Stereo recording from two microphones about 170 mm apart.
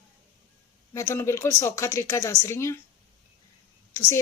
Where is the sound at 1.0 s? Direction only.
15° left (ahead or behind).